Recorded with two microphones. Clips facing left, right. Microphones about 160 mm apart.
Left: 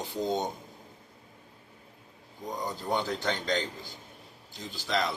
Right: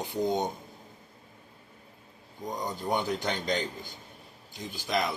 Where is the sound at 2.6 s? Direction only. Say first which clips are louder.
Right 1 dB; 15° right (ahead or behind).